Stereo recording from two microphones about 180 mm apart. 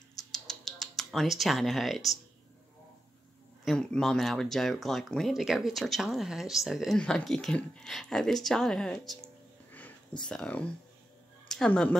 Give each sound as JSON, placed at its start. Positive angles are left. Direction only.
{"t": 0.1, "sound": "typing", "side_deg": 0}
{"t": 3.6, "sound": "speech", "side_deg": 5}
{"t": 9.7, "sound": "a sound", "side_deg": 10}
{"t": 10.2, "sound": "speech", "side_deg": 5}